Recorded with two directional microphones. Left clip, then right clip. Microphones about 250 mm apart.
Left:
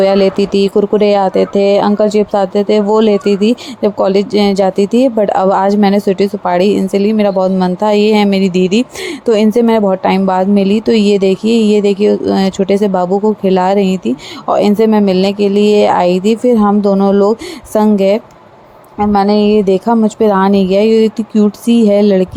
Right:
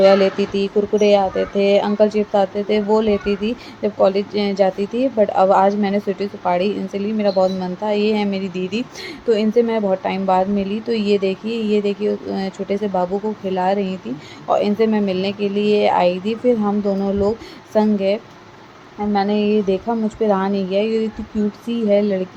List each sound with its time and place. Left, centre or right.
0.0 s speech: left